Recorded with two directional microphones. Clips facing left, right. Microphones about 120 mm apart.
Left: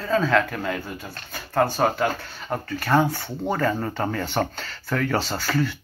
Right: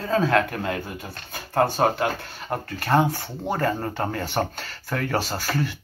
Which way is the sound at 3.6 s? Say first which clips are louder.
Left 1 dB; 40° right (ahead or behind).